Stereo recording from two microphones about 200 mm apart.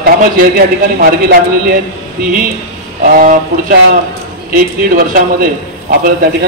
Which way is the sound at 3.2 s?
45° right (ahead or behind).